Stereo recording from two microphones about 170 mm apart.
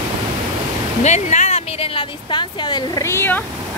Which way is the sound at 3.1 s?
10° left (ahead or behind).